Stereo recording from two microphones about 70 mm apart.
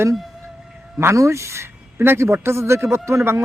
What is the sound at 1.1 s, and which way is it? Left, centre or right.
A man's voice, right.